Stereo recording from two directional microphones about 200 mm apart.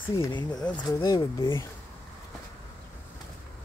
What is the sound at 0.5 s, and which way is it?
Speech, 10° left (ahead or behind).